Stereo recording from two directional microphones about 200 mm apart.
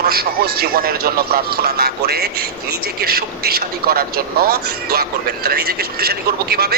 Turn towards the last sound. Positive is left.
turn(degrees=-50)  # may be behind; listen again after turning